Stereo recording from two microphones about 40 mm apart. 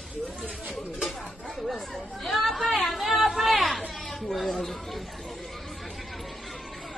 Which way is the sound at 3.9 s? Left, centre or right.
Centre.